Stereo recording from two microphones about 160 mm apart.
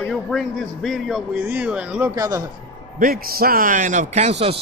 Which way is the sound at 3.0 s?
65° right (ahead or behind).